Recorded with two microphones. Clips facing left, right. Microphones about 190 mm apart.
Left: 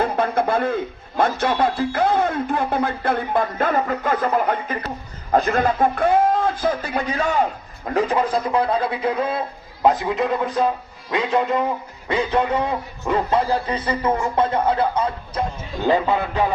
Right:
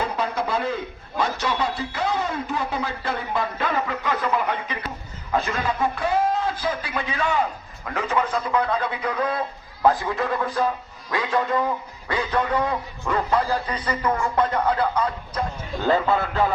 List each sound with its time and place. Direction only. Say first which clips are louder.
0.0 s a man's voice: left 6 dB; 55° left (ahead or behind); by 16.5 s 15° left (ahead or behind)